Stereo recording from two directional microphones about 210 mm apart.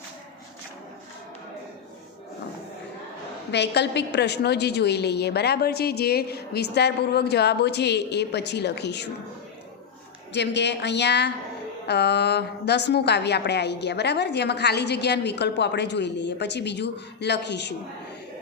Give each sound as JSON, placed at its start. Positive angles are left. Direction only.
{"t": 3.5, "sound": "a woman's voice", "side_deg": 55}
{"t": 10.3, "sound": "a woman's voice", "side_deg": 55}